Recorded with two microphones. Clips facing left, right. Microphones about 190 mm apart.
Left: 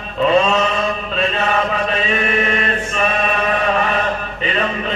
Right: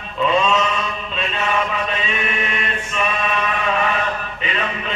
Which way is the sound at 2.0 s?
40° left (ahead or behind).